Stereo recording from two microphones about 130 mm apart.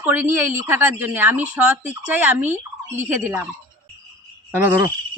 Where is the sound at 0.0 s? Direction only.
15° right (ahead or behind).